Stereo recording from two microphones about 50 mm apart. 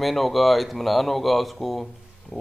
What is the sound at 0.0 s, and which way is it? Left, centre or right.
Speech, centre.